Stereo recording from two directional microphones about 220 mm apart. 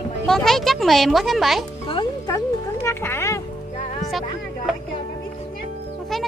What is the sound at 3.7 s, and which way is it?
Music, 35° left (ahead or behind).